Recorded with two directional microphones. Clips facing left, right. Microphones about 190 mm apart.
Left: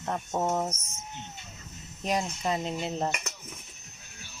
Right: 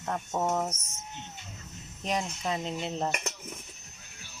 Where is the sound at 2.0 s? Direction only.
5° left (ahead or behind).